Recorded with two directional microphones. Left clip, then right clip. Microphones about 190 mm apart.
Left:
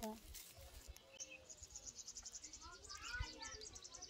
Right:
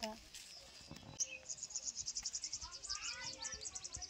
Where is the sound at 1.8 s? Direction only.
40° left (ahead or behind).